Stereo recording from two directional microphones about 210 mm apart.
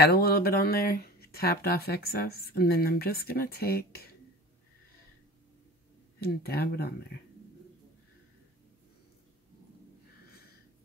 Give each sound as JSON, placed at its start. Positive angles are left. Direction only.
{"t": 0.0, "sound": "speech", "side_deg": 50}
{"t": 6.2, "sound": "speech", "side_deg": 50}